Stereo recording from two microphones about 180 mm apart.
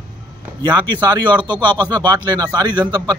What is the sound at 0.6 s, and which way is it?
Speech, 25° right (ahead or behind).